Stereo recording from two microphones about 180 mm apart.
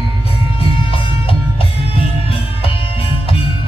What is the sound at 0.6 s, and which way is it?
Music, 30° left (ahead or behind).